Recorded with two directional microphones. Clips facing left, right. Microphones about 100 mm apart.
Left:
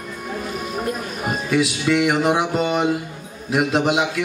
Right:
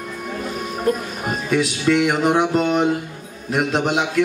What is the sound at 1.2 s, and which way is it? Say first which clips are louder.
A man's voice: even; centre (ahead or behind).